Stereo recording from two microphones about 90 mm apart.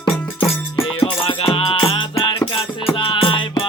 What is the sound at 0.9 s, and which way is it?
Music, 80° left.